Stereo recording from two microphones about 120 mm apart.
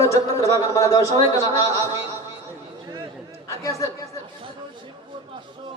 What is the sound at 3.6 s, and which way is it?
Speech, 25° left (ahead or behind).